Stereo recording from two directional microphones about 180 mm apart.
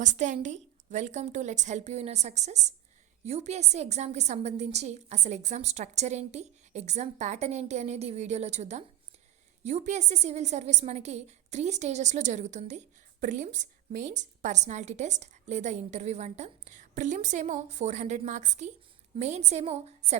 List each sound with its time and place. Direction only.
0.0 s a woman's voice: 45° right (ahead or behind)